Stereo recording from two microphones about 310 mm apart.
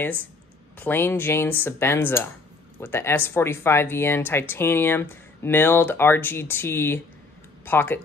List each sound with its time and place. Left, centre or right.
0.7 s speech: centre